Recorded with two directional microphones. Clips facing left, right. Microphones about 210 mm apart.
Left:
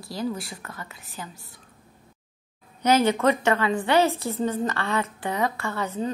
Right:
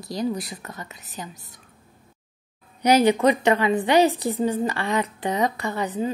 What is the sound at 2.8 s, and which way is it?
A woman's voice, 15° right (ahead or behind).